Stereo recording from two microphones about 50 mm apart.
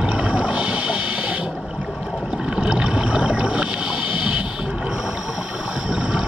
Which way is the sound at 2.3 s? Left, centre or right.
Centre.